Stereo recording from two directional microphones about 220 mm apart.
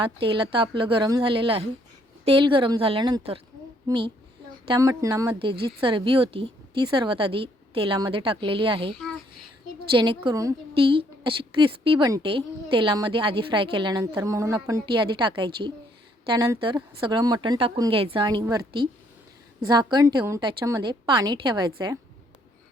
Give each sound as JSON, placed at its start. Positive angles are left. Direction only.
{"t": 0.0, "sound": "a woman's voice", "side_deg": -25}
{"t": 19.6, "sound": "a woman's voice", "side_deg": -20}